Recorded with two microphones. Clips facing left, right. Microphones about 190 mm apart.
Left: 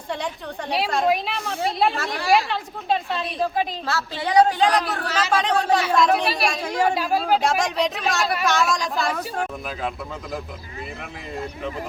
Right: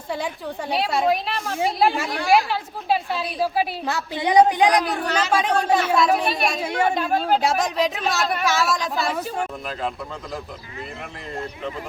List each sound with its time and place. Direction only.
0.7 s a woman's voice: 5° right (ahead or behind)
6.8 s speech: 5° left (ahead or behind)